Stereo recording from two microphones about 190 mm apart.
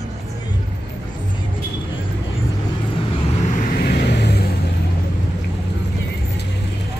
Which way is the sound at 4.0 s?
60° left (ahead or behind).